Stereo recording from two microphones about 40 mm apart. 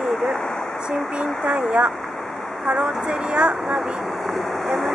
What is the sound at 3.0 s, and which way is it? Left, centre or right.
Speech, centre.